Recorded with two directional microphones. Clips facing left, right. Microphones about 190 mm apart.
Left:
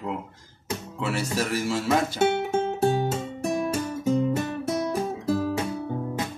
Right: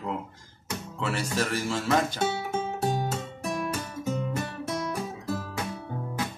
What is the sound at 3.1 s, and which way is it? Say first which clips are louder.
Guitar: left 5 dB; 30° left (ahead or behind).